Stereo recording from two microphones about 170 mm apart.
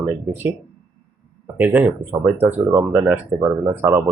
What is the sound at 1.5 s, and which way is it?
Speech, 10° right (ahead or behind).